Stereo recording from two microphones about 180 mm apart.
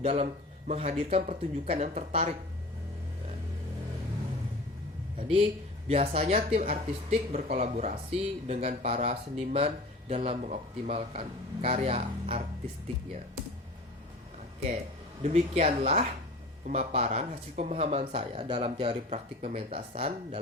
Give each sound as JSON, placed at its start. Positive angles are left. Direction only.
{"t": 0.0, "sound": "speech", "side_deg": -35}
{"t": 5.9, "sound": "speech", "side_deg": -35}
{"t": 15.2, "sound": "speech", "side_deg": -40}